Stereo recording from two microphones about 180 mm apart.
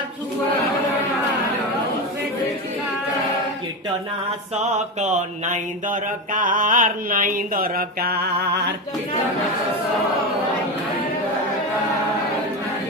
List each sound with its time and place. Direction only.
4.6 s mantra: 40° right (ahead or behind); by 8.7 s 60° right (ahead or behind)